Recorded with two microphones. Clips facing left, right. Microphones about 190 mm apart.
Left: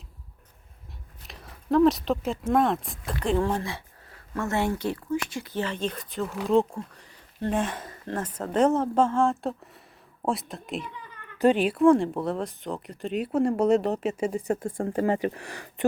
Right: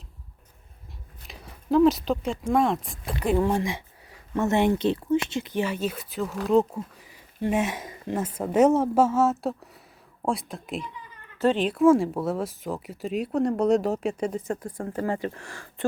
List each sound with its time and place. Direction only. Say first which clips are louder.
1.2 s speech: right 1 dB; centre (ahead or behind)
3.2 s speech: right 2 dB; 10° right (ahead or behind)
11.3 s speech: left 1 dB; 15° left (ahead or behind)
14.5 s speech: left 4 dB; 25° left (ahead or behind)